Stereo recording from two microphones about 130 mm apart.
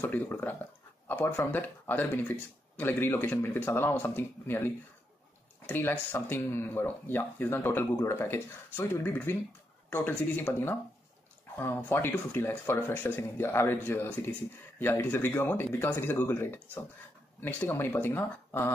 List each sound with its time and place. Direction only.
0.0 s speech: 15° left (ahead or behind)